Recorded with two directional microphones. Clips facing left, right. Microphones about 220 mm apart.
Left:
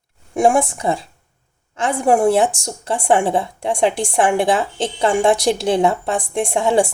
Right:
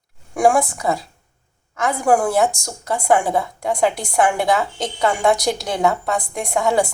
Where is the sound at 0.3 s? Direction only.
25° left (ahead or behind).